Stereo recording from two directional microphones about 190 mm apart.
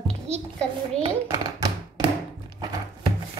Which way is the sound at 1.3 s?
20° right (ahead or behind).